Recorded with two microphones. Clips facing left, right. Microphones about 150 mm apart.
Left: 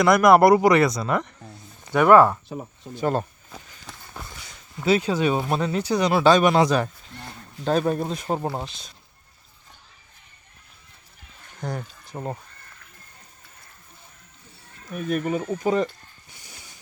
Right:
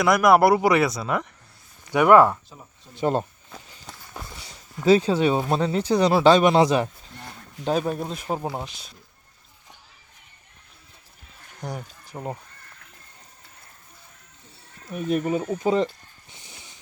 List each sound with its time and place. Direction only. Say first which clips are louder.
0.0 s speech: left 2 dB; 5° right (ahead or behind)
2.5 s speech: left 13 dB; 65° left (ahead or behind)
2.9 s speech: right 1 dB; 25° right (ahead or behind)
3.8 s run: right 1 dB; centre (ahead or behind)
4.4 s dog: right 1 dB; 30° right (ahead or behind)
5.5 s speech: right 2 dB; 25° right (ahead or behind)
7.6 s speech: left 2 dB; 5° right (ahead or behind)
11.6 s speech: left 2 dB; 15° right (ahead or behind)
12.1 s speech: left 1 dB; 10° left (ahead or behind)
14.8 s speech: right 1 dB; 20° right (ahead or behind)
16.3 s a sound: right 1 dB; 25° right (ahead or behind)